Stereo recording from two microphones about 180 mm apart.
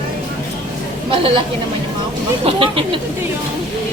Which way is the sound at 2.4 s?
30° right (ahead or behind).